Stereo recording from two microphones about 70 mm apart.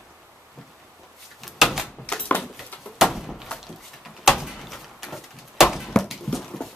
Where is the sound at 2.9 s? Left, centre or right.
Centre.